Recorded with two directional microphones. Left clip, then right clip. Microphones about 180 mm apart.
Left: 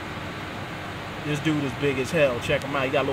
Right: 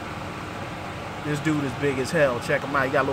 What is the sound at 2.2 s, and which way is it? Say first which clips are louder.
Speech: right 1 dB; 5° right (ahead or behind).